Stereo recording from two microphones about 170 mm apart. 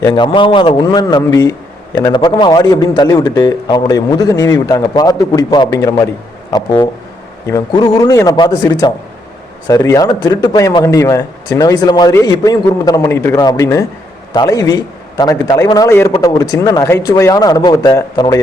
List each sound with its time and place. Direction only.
0.0 s a man's voice: 25° left (ahead or behind)